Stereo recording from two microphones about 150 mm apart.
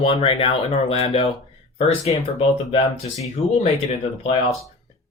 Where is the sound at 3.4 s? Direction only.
40° left (ahead or behind).